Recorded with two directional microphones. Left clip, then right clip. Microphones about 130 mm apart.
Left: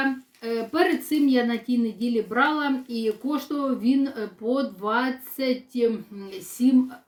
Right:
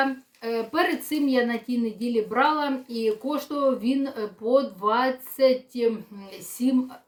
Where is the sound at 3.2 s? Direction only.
10° right (ahead or behind).